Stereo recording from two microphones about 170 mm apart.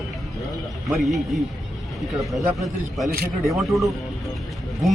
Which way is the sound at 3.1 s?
65° right (ahead or behind).